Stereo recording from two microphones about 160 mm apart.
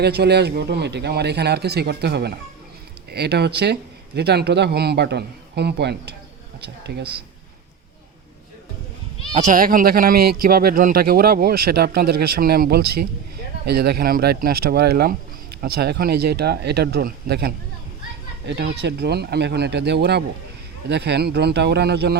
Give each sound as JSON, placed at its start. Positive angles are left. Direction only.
{"t": 0.0, "sound": "speech", "side_deg": -90}
{"t": 9.3, "sound": "speech", "side_deg": -55}
{"t": 13.7, "sound": "speech", "side_deg": -85}